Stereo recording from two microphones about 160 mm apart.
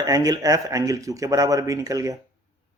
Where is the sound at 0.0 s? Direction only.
25° right (ahead or behind).